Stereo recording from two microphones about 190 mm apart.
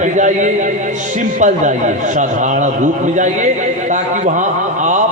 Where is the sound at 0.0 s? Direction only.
40° right (ahead or behind).